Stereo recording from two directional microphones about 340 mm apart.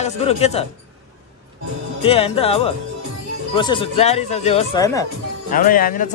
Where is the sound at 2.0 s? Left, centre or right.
Centre.